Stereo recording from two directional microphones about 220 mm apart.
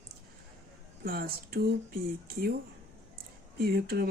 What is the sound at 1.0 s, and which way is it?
Speech, 45° right (ahead or behind).